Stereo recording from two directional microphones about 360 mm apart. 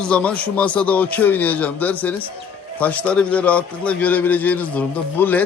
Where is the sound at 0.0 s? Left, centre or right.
Centre.